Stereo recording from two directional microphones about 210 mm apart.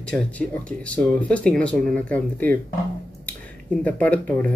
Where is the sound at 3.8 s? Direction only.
5° left (ahead or behind).